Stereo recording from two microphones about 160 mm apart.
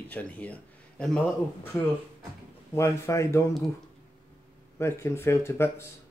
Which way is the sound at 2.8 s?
20° left (ahead or behind).